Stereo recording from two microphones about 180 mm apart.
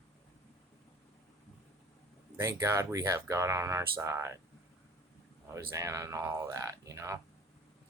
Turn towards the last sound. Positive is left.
turn(degrees=-15)  # may be behind; listen again after turning